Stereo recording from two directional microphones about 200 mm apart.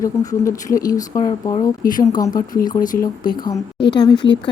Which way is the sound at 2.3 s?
45° left (ahead or behind).